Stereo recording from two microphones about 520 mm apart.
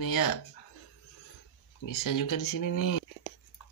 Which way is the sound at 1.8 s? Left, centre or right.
Left.